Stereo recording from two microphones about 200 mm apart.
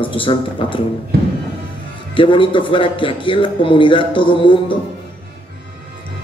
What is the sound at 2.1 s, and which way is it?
A man's voice, 25° left (ahead or behind).